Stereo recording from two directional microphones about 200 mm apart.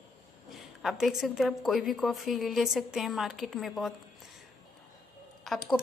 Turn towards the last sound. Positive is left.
turn(degrees=0)  # may be behind; listen again after turning